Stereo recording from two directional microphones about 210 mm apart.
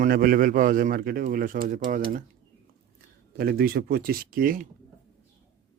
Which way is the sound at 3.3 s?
45° right (ahead or behind).